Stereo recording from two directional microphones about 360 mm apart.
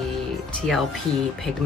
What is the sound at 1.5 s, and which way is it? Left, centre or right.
Speech, centre.